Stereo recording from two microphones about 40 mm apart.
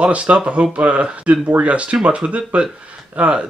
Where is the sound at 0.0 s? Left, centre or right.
Right.